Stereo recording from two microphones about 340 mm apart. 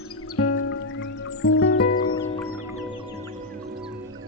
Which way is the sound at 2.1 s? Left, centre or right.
Centre.